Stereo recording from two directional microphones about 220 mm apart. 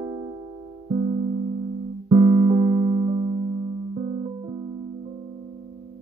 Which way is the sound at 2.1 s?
25° right (ahead or behind).